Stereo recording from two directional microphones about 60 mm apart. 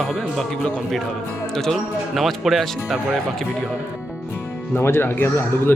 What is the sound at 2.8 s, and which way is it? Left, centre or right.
Speech, centre.